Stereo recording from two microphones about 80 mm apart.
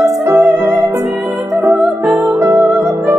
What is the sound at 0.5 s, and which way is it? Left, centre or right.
Music, right.